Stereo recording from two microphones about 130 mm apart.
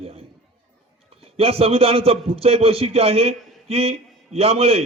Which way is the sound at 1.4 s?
50° right (ahead or behind).